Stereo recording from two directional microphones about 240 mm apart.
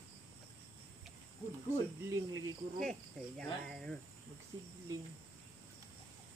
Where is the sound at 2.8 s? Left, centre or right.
Centre.